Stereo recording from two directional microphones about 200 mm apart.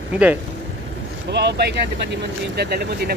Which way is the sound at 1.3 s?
55° right (ahead or behind).